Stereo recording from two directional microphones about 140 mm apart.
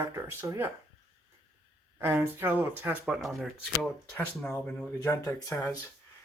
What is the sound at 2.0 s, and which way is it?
Speech, 15° right (ahead or behind).